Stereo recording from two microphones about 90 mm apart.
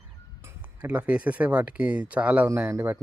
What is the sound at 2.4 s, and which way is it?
Speech, 25° right (ahead or behind).